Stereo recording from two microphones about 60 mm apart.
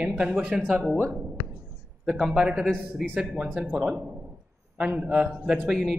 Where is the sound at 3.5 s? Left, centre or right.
Right.